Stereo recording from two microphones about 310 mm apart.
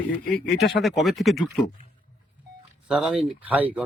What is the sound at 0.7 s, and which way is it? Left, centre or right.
Speech, centre.